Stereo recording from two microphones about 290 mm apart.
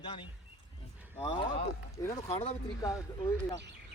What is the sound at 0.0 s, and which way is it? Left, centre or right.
Speech, centre.